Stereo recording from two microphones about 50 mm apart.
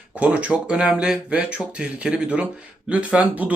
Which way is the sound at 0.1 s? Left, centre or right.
Right.